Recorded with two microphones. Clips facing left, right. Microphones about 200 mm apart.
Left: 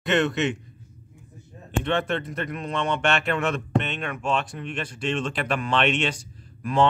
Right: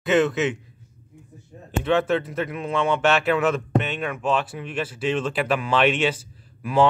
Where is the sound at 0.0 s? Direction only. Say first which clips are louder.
Right 3 dB; 5° right (ahead or behind).